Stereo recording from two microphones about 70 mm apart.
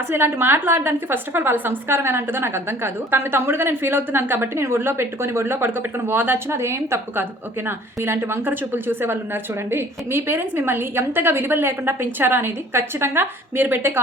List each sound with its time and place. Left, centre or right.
0.1 s a woman's voice: right